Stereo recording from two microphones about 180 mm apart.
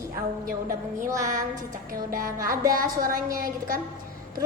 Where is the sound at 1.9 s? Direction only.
50° right (ahead or behind).